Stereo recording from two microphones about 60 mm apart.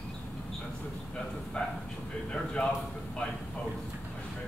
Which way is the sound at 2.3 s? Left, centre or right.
Centre.